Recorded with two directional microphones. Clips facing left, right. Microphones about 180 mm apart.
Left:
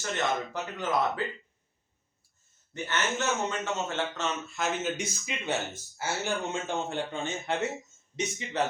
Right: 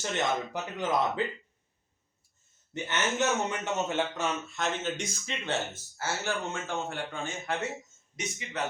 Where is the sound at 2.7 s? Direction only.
20° right (ahead or behind).